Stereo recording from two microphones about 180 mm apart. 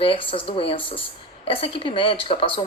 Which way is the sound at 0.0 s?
30° left (ahead or behind).